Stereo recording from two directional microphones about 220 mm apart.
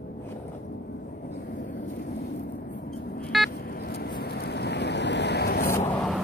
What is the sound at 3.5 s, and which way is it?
Vehicle, 45° left (ahead or behind).